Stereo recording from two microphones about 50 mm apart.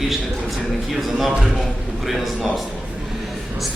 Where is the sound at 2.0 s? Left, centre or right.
Centre.